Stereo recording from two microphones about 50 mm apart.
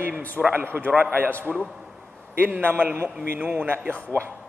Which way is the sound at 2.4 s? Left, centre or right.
Right.